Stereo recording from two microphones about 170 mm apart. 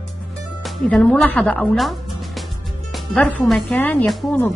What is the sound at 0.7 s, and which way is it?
A woman's voice, 5° left (ahead or behind).